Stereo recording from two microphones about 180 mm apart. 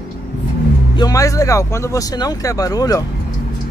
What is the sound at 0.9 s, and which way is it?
Speech, 20° left (ahead or behind).